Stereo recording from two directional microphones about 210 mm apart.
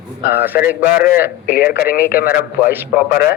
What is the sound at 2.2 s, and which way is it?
Speech, 45° left (ahead or behind).